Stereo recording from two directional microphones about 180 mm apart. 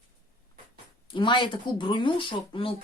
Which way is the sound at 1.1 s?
25° left (ahead or behind).